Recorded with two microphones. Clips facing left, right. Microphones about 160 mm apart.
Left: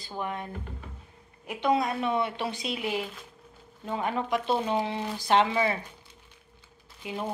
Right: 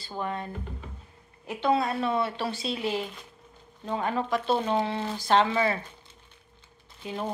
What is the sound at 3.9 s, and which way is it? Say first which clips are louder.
A woman's voice: right 1 dB; 20° left (ahead or behind).